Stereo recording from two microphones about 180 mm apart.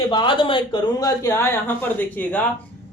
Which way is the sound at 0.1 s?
25° left (ahead or behind).